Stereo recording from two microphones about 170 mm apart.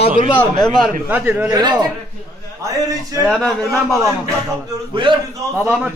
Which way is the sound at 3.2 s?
15° right (ahead or behind).